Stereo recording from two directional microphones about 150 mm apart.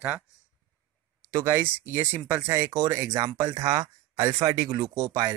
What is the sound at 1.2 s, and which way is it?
Speech, 20° right (ahead or behind).